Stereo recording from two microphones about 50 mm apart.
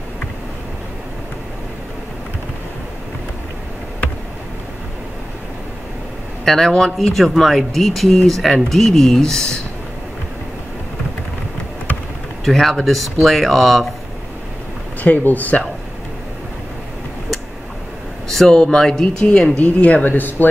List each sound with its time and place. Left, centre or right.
6.4 s speech: centre
12.4 s speech: centre
15.0 s speech: left
18.3 s speech: centre
19.6 s speech: left